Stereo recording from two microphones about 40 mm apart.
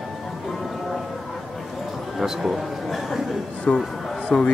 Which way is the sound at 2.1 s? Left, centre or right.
Centre.